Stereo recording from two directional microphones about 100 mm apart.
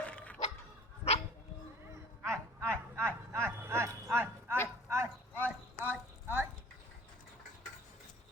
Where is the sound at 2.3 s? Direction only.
25° right (ahead or behind).